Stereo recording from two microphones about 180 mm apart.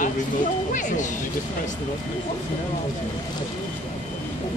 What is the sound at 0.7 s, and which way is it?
Speech, 45° left (ahead or behind).